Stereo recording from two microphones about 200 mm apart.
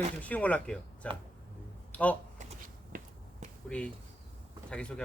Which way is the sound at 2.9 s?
45° right (ahead or behind).